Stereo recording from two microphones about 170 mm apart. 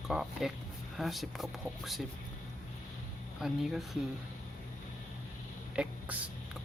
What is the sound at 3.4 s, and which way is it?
Speech, centre (ahead or behind).